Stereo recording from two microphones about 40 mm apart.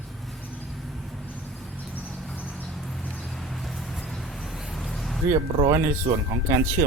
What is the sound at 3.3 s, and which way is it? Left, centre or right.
Vehicle, centre.